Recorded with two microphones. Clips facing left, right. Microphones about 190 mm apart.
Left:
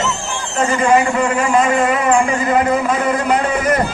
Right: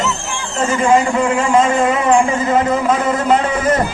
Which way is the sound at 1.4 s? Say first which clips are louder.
Right 1 dB; 25° right (ahead or behind).